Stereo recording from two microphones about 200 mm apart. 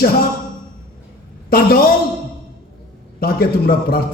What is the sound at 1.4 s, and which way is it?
Speech, 50° left (ahead or behind).